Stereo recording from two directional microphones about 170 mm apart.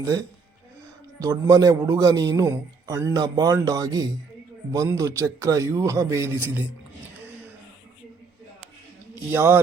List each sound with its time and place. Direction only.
1.2 s a man's voice: 20° right (ahead or behind)
9.3 s a man's voice: 10° right (ahead or behind)